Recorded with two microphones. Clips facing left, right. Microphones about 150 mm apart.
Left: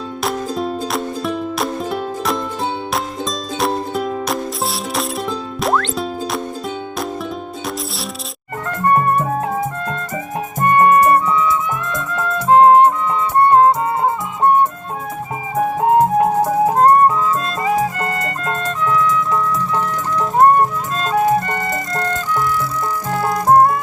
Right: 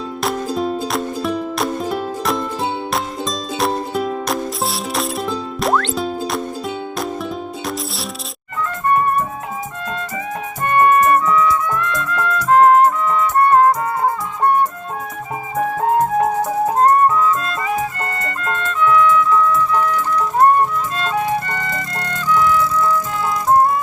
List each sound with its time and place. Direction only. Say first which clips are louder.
0.2 s music: right 1 dB; centre (ahead or behind)
3.6 s music: even; centre (ahead or behind)
8.6 s music: left 2 dB; 50° left (ahead or behind)
10.6 s music: left 2 dB; 30° left (ahead or behind)
16.4 s music: left 2 dB; 30° left (ahead or behind)
21.0 s music: left 6 dB; 35° left (ahead or behind); by 23.8 s 55° left (ahead or behind)